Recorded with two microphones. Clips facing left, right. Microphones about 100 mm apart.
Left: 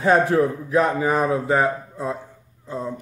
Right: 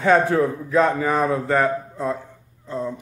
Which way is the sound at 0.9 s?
25° left (ahead or behind).